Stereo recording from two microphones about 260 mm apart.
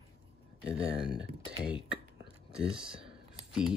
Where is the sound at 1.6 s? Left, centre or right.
Centre.